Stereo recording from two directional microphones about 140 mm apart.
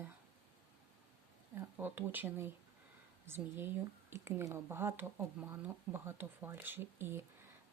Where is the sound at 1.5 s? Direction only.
15° right (ahead or behind).